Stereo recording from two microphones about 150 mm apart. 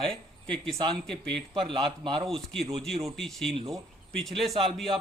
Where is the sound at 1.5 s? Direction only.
35° right (ahead or behind).